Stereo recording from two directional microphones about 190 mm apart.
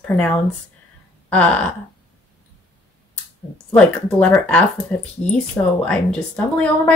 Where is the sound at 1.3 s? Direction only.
5° left (ahead or behind).